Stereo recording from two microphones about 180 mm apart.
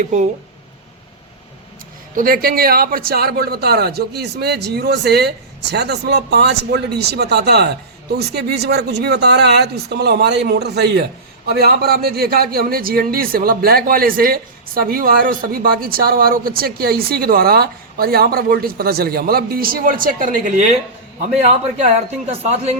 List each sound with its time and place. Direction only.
0.0 s a man's voice: 40° right (ahead or behind)
2.1 s speech: 55° right (ahead or behind)
22.3 s a man's voice: 35° right (ahead or behind)